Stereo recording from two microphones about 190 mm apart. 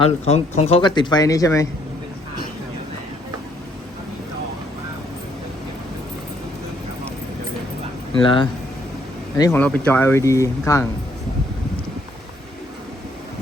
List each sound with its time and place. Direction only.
0.0 s speech: 35° left (ahead or behind); by 1.6 s 15° left (ahead or behind)
8.2 s speech: 25° left (ahead or behind)
9.4 s speech: 10° left (ahead or behind)